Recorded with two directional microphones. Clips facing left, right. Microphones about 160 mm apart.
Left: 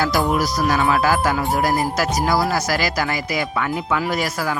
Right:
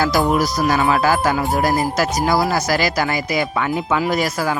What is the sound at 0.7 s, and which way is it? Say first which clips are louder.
Speech: right 1 dB; 30° right (ahead or behind).